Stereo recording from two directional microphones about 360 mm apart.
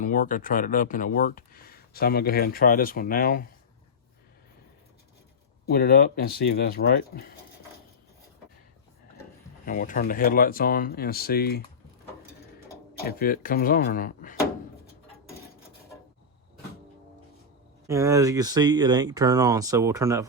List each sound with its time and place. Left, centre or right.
0.0 s speech: left
5.6 s speech: left
9.6 s speech: left
12.7 s speech: left
17.8 s speech: centre